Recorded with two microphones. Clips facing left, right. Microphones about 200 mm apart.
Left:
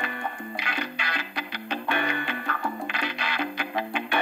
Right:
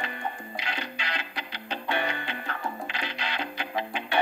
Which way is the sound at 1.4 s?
60° left (ahead or behind).